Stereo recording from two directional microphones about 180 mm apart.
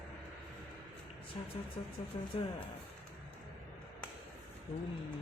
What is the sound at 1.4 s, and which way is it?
Speech, 30° left (ahead or behind).